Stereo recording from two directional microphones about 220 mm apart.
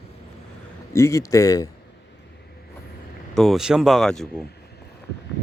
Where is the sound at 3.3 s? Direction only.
Centre (ahead or behind).